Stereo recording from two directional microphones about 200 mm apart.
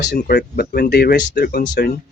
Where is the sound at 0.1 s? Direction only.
55° left (ahead or behind).